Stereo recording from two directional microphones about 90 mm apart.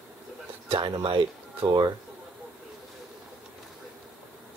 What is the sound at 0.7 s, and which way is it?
Speech, 75° right (ahead or behind).